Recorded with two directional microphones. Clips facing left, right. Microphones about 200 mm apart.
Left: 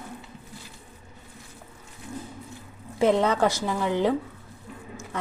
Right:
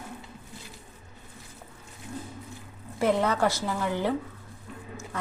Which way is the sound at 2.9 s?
20° left (ahead or behind).